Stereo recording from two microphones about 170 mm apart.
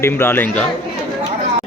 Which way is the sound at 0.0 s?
15° left (ahead or behind).